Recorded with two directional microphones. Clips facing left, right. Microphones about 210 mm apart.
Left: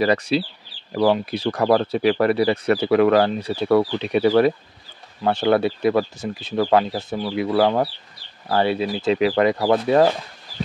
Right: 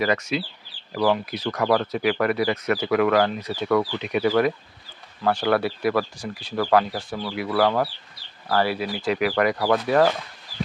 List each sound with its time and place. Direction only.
0.0 s speech: 35° left (ahead or behind)